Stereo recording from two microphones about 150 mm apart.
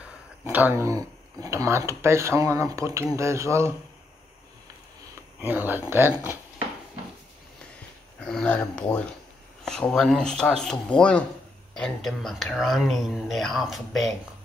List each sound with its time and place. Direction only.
0.0 s speech: 10° right (ahead or behind)
5.5 s speech: 15° right (ahead or behind)
8.2 s speech: 5° left (ahead or behind)